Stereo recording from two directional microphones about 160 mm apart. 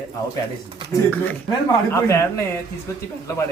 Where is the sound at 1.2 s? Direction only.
15° left (ahead or behind).